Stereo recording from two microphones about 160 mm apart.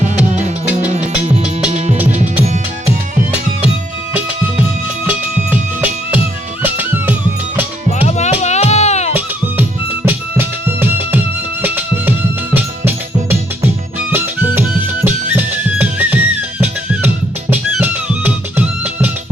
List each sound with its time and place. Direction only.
5.0 s music: 10° right (ahead or behind)
7.9 s music: 45° left (ahead or behind)
10.1 s music: 15° right (ahead or behind)
14.1 s music: 15° right (ahead or behind)